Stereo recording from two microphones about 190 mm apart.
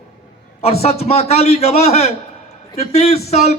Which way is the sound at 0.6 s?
30° left (ahead or behind).